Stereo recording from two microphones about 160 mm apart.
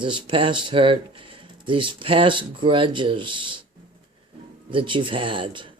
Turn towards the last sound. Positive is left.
turn(degrees=-30)  # may be behind; listen again after turning